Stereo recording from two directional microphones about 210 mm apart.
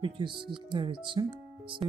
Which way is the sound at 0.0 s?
25° right (ahead or behind).